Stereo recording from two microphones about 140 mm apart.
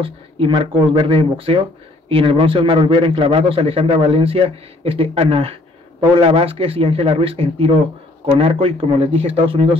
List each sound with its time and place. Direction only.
0.0 s a man's voice: 40° right (ahead or behind)